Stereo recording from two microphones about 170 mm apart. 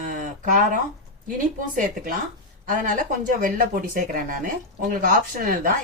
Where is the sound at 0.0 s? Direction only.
50° right (ahead or behind).